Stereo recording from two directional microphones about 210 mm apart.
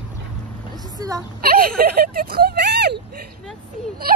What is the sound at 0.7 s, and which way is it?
Speech, 15° right (ahead or behind).